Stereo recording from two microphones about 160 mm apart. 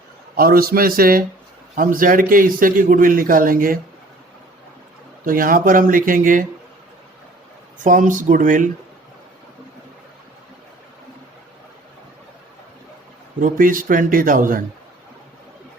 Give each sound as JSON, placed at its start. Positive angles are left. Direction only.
{"t": 0.3, "sound": "a man's voice", "side_deg": -65}
{"t": 5.2, "sound": "a man's voice", "side_deg": -60}
{"t": 7.9, "sound": "a man's voice", "side_deg": -55}
{"t": 13.4, "sound": "a man's voice", "side_deg": -60}